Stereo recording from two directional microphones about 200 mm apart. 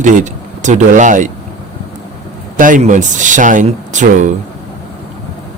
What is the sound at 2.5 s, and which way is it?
Speech, 40° right (ahead or behind).